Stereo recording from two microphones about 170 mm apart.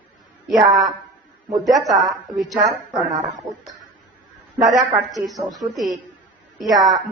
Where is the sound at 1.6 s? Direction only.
Centre (ahead or behind).